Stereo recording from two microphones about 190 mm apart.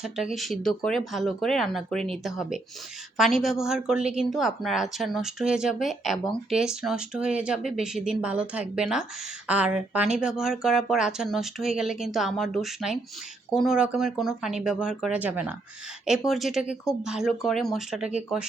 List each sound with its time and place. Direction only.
0.0 s a woman's voice: centre (ahead or behind)